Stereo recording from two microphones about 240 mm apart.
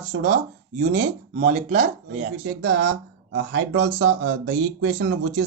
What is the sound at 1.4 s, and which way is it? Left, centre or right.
Speech, right.